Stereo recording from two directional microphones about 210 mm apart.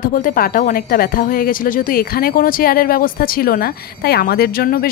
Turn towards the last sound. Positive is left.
turn(degrees=45)  # may be behind; listen again after turning